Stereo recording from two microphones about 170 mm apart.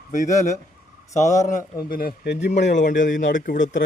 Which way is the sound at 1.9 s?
65° left (ahead or behind).